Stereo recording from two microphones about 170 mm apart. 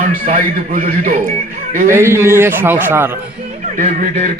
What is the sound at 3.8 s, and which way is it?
Speech, 55° right (ahead or behind).